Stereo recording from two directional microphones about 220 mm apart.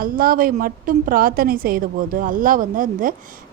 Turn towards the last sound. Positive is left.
turn(degrees=-40)  # may be behind; listen again after turning